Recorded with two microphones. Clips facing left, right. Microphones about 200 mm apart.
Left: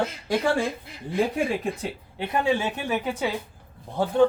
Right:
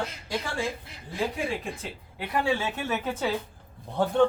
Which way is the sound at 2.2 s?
25° left (ahead or behind).